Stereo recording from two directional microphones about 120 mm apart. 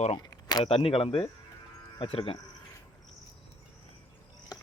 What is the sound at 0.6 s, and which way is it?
Speech, 55° left (ahead or behind).